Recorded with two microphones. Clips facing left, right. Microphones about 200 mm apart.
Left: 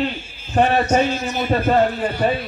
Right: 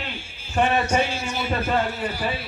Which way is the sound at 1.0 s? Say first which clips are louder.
Left 5 dB; 10° right (ahead or behind).